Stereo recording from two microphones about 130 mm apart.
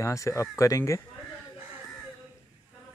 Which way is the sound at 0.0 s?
25° left (ahead or behind).